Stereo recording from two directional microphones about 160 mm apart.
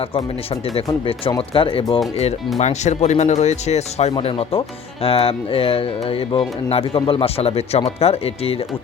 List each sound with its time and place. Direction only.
1.4 s speech: 35° left (ahead or behind)
2.6 s speech: 45° left (ahead or behind)